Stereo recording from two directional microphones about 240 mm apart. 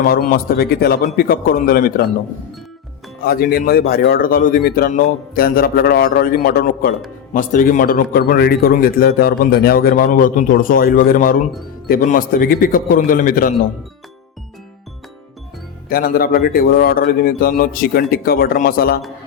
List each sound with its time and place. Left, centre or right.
0.0 s a man's voice: left
3.2 s a man's voice: left
15.9 s a man's voice: left